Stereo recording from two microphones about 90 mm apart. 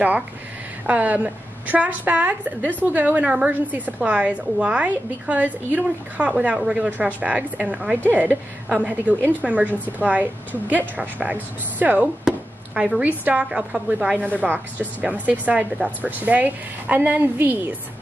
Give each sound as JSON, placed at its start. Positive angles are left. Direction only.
{"t": 0.8, "sound": "a woman's voice", "side_deg": -15}